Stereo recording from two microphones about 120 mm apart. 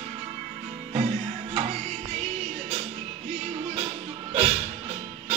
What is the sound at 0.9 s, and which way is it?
Music, 65° right (ahead or behind).